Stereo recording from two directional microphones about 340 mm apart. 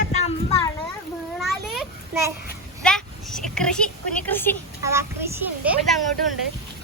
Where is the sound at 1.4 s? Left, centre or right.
Centre.